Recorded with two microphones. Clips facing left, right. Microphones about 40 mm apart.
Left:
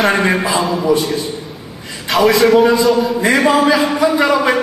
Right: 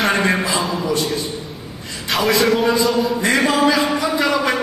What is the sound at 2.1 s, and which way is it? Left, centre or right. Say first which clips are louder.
A man's voice: left 5 dB; centre.